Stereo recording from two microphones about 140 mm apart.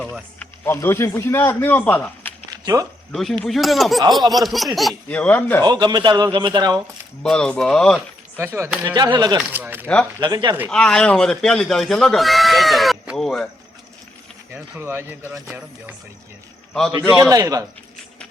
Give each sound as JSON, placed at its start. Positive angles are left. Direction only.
{"t": 0.0, "sound": "speech", "side_deg": 10}
{"t": 2.5, "sound": "a sound", "side_deg": -25}
{"t": 3.1, "sound": "speech", "side_deg": 5}
{"t": 5.6, "sound": "a man's voice", "side_deg": -30}
{"t": 7.2, "sound": "speech", "side_deg": 5}
{"t": 8.8, "sound": "a man's voice", "side_deg": -30}
{"t": 9.5, "sound": "speech", "side_deg": -15}
{"t": 9.8, "sound": "speech", "side_deg": 5}
{"t": 10.2, "sound": "a man's voice", "side_deg": -30}
{"t": 10.7, "sound": "speech", "side_deg": 5}
{"t": 14.5, "sound": "speech", "side_deg": -15}
{"t": 17.2, "sound": "a man's voice", "side_deg": -25}